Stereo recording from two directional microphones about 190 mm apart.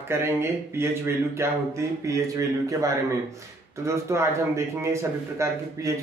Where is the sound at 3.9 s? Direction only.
15° right (ahead or behind).